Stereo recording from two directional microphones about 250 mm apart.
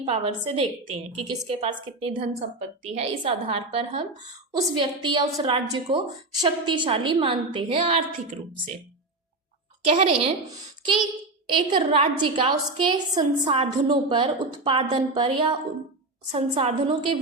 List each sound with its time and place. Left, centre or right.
0.0 s a woman's voice: right
9.8 s a woman's voice: right
11.5 s a woman's voice: right